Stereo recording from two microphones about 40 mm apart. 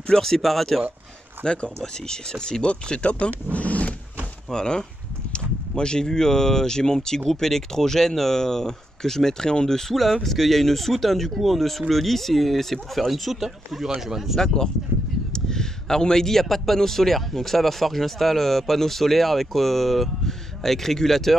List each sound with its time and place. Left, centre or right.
0.2 s a man's voice: centre
1.4 s speech: left
3.5 s roaring cats: left
4.5 s a man's voice: centre
13.1 s a man's voice: centre
14.4 s a man's voice: centre